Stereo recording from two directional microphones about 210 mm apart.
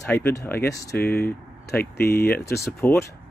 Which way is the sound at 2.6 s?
10° left (ahead or behind).